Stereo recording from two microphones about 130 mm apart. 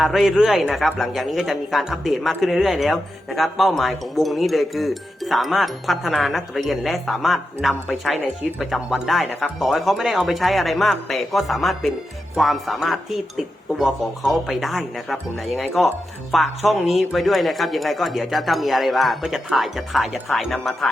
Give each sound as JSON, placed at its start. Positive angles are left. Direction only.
{"t": 0.0, "sound": "a man's voice", "side_deg": 0}